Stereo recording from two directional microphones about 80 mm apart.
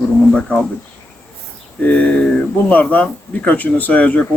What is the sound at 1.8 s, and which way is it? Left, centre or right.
Speech, centre.